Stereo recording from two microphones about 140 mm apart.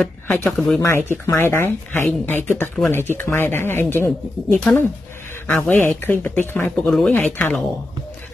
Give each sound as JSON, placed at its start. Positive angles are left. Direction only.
{"t": 0.0, "sound": "speech", "side_deg": 15}
{"t": 0.7, "sound": "speech", "side_deg": 15}